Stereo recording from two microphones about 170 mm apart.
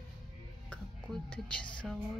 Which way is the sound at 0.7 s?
5° left (ahead or behind).